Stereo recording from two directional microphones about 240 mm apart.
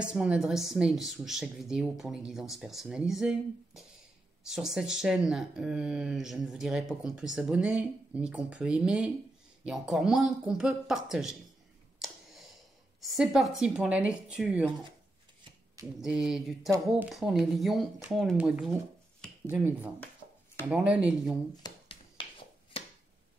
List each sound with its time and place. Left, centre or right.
0.0 s speech: centre
12.0 s a sound: centre
13.0 s speech: centre
15.7 s speech: centre
21.6 s finger snapping: left